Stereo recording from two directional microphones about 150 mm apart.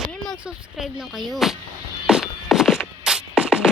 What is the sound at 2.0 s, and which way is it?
Music, 5° right (ahead or behind).